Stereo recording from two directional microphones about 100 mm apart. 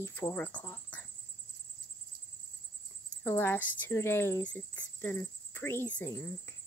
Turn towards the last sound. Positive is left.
turn(degrees=30)  # may be behind; listen again after turning